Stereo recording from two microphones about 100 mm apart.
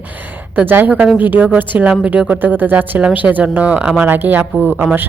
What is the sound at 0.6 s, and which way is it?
A woman's voice, 20° right (ahead or behind).